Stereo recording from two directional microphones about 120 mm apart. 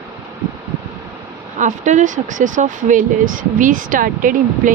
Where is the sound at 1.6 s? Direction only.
90° right.